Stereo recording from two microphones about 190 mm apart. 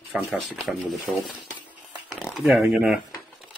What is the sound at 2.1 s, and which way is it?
Speech, centre (ahead or behind).